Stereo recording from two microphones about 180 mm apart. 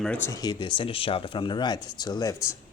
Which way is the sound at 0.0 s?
5° left (ahead or behind).